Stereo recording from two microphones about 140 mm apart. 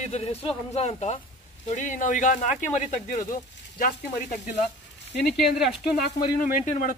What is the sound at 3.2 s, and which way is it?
Speech, 75° left (ahead or behind).